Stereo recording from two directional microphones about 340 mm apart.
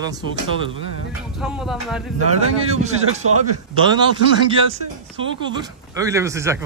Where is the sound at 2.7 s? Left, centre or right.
Centre.